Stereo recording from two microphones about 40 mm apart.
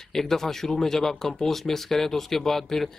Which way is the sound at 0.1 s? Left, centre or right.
Centre.